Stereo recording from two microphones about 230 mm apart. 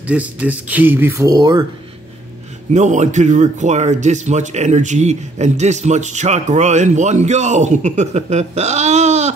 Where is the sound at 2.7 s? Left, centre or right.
Right.